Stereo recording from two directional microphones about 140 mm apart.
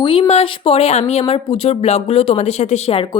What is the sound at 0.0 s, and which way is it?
A woman's voice, 40° left (ahead or behind).